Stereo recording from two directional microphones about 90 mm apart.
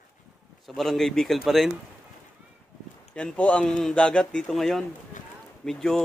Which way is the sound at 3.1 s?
15° left (ahead or behind).